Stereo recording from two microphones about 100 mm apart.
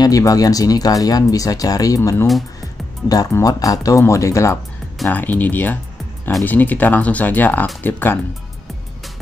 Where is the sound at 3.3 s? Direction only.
35° left (ahead or behind).